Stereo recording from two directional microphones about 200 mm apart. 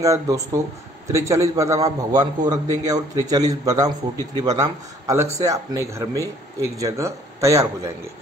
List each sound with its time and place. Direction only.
0.0 s speech: 15° right (ahead or behind)